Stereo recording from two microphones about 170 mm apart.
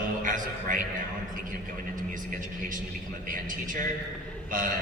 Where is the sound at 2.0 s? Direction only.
50° right (ahead or behind).